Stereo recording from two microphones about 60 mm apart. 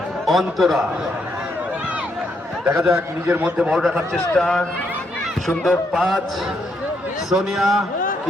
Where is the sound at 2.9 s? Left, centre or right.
Right.